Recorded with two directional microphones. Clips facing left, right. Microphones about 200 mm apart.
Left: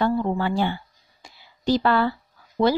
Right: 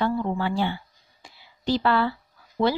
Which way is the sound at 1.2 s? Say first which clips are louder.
Left 3 dB; 45° left (ahead or behind).